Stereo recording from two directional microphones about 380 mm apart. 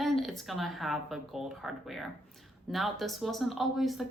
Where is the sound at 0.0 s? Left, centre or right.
Centre.